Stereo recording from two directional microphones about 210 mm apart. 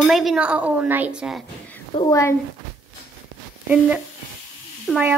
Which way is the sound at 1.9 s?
20° left (ahead or behind).